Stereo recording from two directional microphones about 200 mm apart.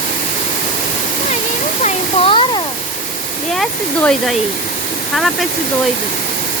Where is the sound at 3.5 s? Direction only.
Centre (ahead or behind).